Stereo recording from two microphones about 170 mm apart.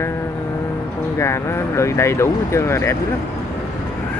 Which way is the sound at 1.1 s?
15° left (ahead or behind).